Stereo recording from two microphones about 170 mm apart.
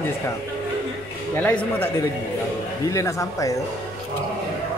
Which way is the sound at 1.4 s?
10° left (ahead or behind).